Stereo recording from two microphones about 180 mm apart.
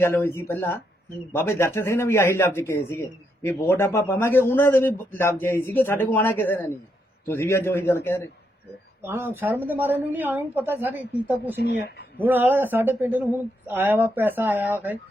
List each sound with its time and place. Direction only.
0.0 s a man's voice: 15° left (ahead or behind)
9.0 s a woman's voice: 15° right (ahead or behind)
11.6 s speech: 65° left (ahead or behind)
12.2 s a woman's voice: 10° right (ahead or behind)